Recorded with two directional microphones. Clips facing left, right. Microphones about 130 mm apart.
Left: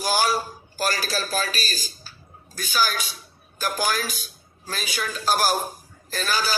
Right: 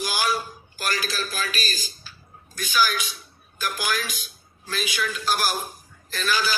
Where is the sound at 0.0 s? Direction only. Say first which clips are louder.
Left 3 dB; 40° left (ahead or behind).